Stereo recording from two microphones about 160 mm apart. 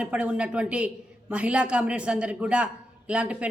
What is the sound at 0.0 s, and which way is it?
A man's voice, 10° right (ahead or behind).